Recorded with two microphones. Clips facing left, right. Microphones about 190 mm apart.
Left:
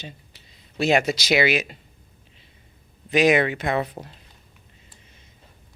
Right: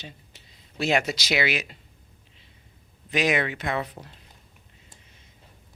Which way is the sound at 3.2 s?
50° left (ahead or behind).